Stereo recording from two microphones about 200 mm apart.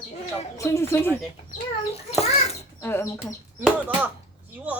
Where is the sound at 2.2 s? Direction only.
30° left (ahead or behind).